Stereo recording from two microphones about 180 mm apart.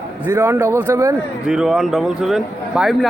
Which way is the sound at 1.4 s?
5° right (ahead or behind).